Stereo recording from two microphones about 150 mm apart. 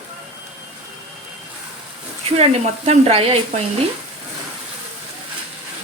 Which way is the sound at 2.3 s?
45° right (ahead or behind).